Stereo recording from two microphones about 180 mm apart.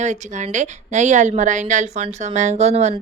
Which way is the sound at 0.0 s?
40° right (ahead or behind).